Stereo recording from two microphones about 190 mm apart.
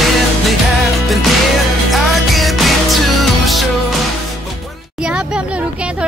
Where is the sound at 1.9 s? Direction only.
Centre (ahead or behind).